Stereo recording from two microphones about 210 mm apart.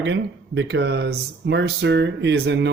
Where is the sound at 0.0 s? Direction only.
60° right (ahead or behind).